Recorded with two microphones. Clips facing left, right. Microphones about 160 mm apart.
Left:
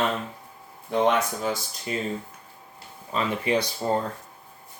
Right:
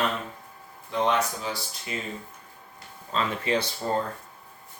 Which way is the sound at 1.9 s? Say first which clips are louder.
Left 5 dB; 40° left (ahead or behind).